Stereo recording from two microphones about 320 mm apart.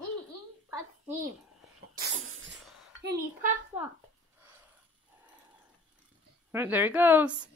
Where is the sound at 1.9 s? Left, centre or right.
Right.